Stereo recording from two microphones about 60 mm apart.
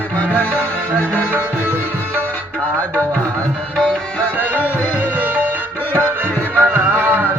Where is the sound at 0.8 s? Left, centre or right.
Right.